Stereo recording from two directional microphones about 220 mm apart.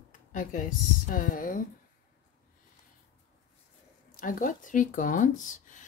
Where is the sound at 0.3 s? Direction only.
35° left (ahead or behind).